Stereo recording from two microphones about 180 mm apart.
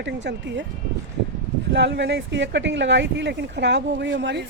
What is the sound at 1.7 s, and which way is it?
Speech, 70° right (ahead or behind).